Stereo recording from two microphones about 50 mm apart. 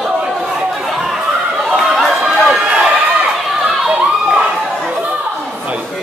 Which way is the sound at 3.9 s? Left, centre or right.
Centre.